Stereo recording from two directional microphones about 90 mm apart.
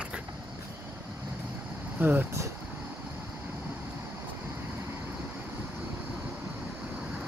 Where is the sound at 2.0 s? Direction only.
20° right (ahead or behind).